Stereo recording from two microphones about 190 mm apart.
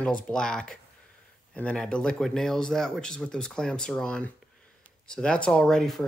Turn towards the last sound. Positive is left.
turn(degrees=0)  # may be behind; listen again after turning